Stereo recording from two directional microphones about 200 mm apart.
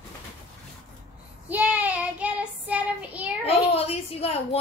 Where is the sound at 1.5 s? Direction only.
5° right (ahead or behind).